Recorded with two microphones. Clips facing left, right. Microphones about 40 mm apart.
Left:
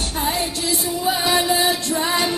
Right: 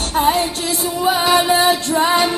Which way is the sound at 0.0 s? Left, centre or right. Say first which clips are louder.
Right 7 dB; right.